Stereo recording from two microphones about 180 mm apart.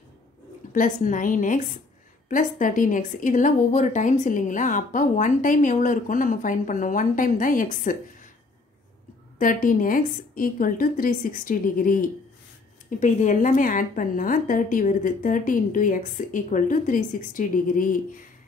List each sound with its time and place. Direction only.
0.7 s a woman's voice: 45° left (ahead or behind)
9.4 s a woman's voice: 50° left (ahead or behind)